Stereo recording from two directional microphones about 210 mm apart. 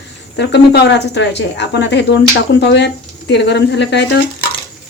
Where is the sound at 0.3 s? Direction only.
55° left (ahead or behind).